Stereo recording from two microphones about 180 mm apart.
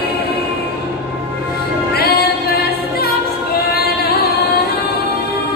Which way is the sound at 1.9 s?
55° left (ahead or behind).